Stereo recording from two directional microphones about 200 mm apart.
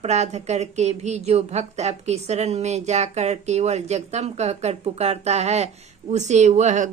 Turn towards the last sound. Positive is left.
turn(degrees=-35)  # may be behind; listen again after turning